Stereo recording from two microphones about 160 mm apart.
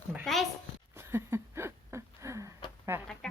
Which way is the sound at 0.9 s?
15° right (ahead or behind).